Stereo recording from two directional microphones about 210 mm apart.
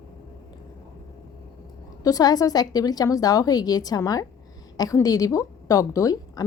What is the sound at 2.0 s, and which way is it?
A woman's voice, 15° left (ahead or behind).